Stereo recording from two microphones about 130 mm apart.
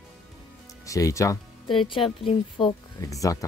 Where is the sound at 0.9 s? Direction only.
25° left (ahead or behind).